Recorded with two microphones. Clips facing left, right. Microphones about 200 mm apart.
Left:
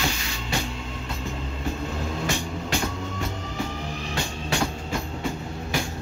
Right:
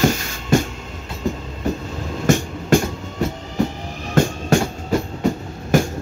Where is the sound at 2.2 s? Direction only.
45° right (ahead or behind).